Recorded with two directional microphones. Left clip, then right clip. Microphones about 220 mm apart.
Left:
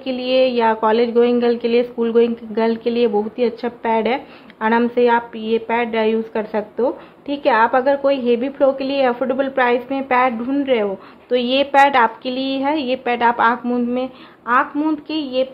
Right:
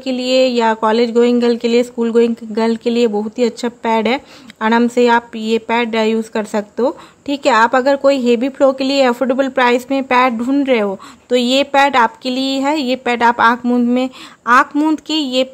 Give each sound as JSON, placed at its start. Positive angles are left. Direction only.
{"t": 0.0, "sound": "speech", "side_deg": -30}